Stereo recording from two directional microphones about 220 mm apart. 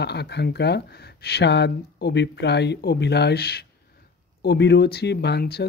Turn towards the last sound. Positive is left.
turn(degrees=50)  # may be behind; listen again after turning